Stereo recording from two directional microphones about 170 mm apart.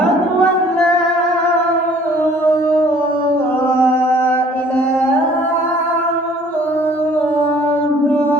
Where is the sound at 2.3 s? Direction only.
15° left (ahead or behind).